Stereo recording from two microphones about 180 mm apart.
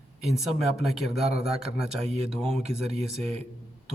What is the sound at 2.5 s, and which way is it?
Speech, 35° right (ahead or behind).